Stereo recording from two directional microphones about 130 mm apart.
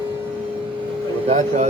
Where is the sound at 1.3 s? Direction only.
60° right (ahead or behind).